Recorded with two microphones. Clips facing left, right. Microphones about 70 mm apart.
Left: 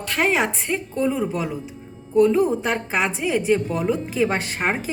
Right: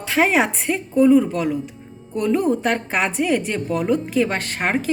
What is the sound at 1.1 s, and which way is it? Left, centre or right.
A woman's voice, centre.